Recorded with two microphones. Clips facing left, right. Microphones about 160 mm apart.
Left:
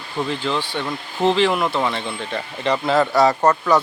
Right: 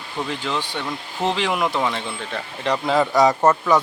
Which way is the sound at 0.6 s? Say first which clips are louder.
Left 2 dB; 15° right (ahead or behind).